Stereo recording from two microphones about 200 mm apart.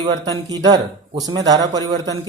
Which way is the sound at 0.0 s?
20° right (ahead or behind).